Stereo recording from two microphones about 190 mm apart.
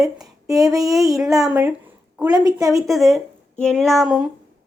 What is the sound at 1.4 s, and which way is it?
Speech, 5° right (ahead or behind).